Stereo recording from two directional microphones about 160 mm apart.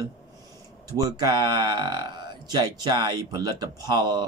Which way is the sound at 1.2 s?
25° right (ahead or behind).